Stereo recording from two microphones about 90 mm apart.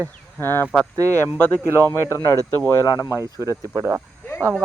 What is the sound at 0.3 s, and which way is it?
Speech, 25° left (ahead or behind).